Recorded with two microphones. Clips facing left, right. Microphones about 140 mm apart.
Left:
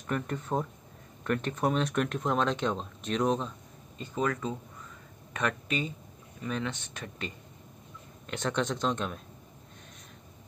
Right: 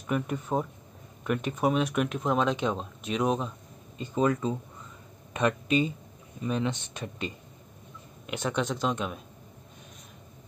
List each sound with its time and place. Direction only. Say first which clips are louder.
0.0 s speech: right 3 dB; 10° right (ahead or behind)
4.0 s speech: right 5 dB; 20° right (ahead or behind)